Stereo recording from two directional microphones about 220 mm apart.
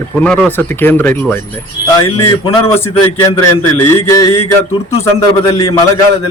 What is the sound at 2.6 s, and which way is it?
A man's voice, 10° left (ahead or behind).